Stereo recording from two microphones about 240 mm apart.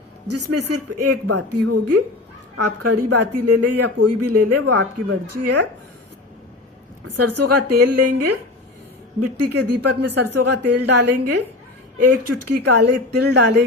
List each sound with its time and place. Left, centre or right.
0.3 s speech: right
7.1 s speech: right
9.4 s speech: right
13.1 s speech: right